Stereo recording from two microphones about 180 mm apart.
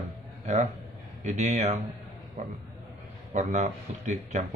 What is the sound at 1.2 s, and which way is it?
Speech, 40° right (ahead or behind).